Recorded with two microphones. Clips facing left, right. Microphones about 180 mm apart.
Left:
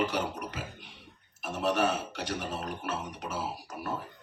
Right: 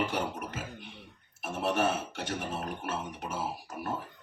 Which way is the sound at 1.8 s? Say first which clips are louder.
Even; 50° right (ahead or behind).